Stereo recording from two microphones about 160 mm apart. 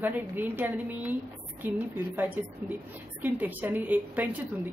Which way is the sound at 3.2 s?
10° right (ahead or behind).